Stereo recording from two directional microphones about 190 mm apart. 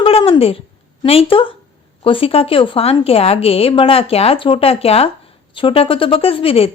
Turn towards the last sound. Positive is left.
turn(degrees=30)  # may be behind; listen again after turning